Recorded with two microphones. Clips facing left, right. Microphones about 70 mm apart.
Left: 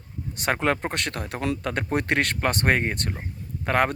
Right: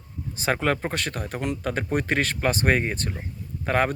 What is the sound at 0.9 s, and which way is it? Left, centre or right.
Speech, left.